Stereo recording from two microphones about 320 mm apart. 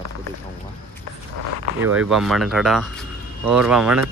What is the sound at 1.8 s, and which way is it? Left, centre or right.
A man's voice, centre.